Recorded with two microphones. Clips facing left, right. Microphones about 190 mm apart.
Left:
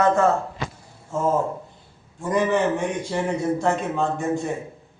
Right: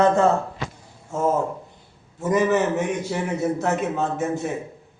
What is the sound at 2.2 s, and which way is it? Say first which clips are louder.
A man's voice: right 1 dB; 5° right (ahead or behind).